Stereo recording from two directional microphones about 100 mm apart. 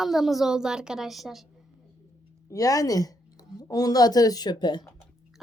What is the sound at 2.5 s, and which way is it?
A woman's voice, 35° left (ahead or behind).